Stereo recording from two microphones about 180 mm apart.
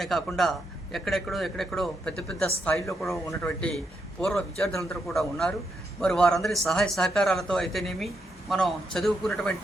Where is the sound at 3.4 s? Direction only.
5° left (ahead or behind).